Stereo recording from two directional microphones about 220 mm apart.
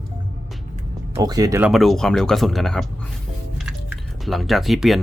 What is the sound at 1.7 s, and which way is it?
Speech, centre (ahead or behind).